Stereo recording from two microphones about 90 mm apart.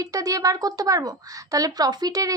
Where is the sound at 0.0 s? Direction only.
40° right (ahead or behind).